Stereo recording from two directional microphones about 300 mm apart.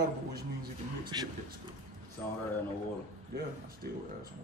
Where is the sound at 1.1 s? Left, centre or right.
Centre.